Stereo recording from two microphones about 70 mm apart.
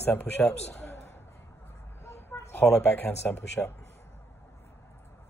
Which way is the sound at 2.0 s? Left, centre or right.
Left.